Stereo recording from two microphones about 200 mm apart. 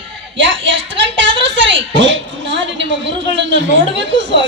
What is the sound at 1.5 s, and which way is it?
A woman's voice, 65° right (ahead or behind).